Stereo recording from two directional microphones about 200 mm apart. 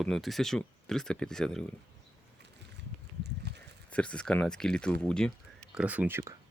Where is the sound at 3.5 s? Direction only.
55° right (ahead or behind).